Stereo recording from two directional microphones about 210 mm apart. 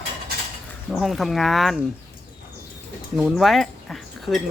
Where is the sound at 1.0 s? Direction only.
Centre (ahead or behind).